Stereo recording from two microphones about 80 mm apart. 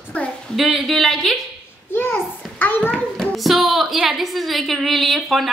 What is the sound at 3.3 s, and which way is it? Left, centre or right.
A woman's voice, centre.